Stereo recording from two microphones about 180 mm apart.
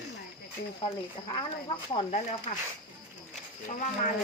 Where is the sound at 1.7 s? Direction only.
35° left (ahead or behind).